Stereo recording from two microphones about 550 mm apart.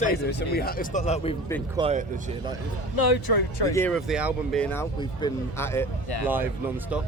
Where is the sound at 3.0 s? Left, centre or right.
Left.